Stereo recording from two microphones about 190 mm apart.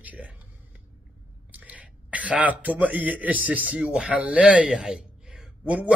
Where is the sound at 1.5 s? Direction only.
10° right (ahead or behind).